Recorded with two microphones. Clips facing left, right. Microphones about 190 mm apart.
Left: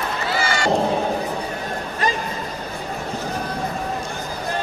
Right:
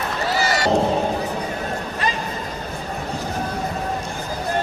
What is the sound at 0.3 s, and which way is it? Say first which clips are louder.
Run: right 2 dB; 40° right (ahead or behind).